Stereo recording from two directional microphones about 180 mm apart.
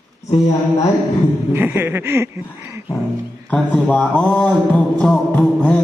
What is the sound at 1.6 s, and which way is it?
Chuckle, 10° right (ahead or behind).